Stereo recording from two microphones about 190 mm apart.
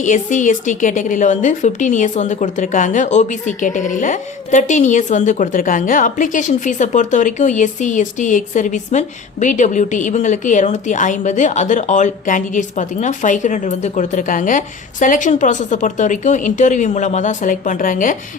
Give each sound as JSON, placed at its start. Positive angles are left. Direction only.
{"t": 0.0, "sound": "speech", "side_deg": 40}